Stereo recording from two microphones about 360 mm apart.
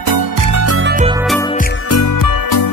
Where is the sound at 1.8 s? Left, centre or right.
Left.